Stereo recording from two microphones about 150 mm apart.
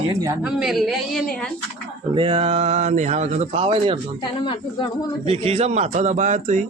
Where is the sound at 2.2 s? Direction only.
35° right (ahead or behind).